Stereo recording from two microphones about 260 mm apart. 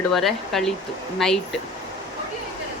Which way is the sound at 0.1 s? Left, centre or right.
Centre.